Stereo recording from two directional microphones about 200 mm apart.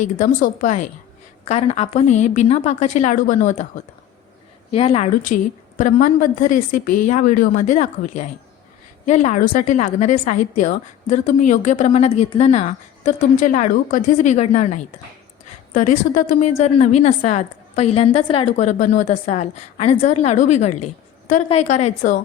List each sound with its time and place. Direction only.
0.0 s a woman's voice: 40° left (ahead or behind)
4.7 s a woman's voice: 30° left (ahead or behind)